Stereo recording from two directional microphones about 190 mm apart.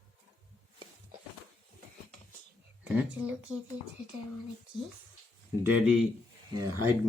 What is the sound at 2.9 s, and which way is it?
Speech, 5° right (ahead or behind).